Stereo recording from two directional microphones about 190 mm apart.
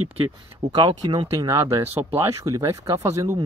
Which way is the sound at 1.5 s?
15° right (ahead or behind).